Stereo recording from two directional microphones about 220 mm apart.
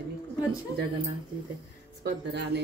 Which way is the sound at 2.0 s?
50° right (ahead or behind).